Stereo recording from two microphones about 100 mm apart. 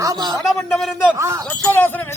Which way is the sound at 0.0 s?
40° right (ahead or behind).